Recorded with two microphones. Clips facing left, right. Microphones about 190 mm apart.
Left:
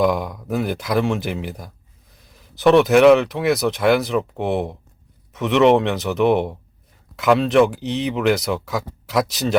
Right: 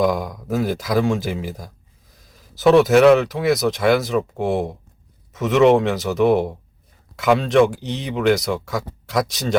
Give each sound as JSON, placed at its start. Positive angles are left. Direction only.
{"t": 0.0, "sound": "speech", "side_deg": 0}